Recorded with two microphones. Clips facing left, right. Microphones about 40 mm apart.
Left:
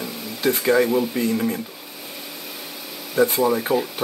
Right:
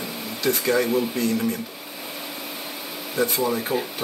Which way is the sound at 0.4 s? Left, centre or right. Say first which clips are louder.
Left 3 dB; centre.